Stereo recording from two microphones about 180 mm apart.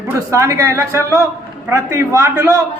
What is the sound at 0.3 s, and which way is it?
A man's voice, 15° right (ahead or behind).